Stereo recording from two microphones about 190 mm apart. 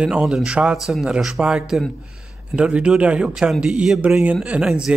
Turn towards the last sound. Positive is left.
turn(degrees=-5)  # may be behind; listen again after turning